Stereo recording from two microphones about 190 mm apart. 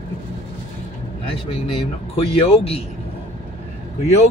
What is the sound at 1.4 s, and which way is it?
Speech, 30° left (ahead or behind).